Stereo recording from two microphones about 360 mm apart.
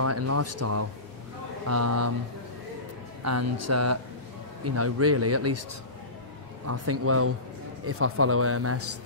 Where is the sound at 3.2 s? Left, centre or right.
Right.